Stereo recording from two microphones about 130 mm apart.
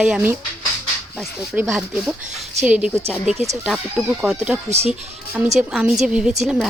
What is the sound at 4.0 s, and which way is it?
Speech, centre (ahead or behind).